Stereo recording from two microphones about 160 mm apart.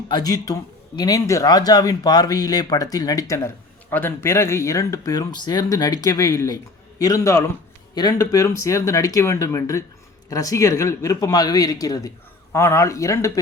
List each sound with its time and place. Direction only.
0.1 s speech: 25° left (ahead or behind)